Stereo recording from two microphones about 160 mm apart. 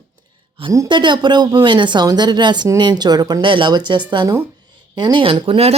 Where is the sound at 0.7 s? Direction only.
25° right (ahead or behind).